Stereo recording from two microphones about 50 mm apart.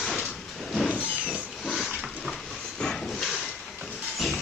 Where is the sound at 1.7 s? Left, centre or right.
Centre.